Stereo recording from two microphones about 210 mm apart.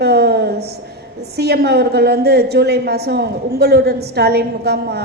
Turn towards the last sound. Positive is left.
turn(degrees=-50)  # may be behind; listen again after turning